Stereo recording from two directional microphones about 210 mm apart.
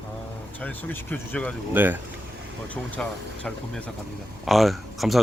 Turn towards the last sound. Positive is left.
turn(degrees=0)  # may be behind; listen again after turning